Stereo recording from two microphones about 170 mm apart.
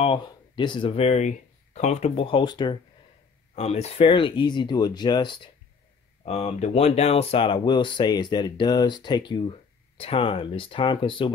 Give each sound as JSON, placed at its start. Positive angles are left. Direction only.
{"t": 0.0, "sound": "speech", "side_deg": 30}
{"t": 3.5, "sound": "speech", "side_deg": 40}
{"t": 6.2, "sound": "speech", "side_deg": 40}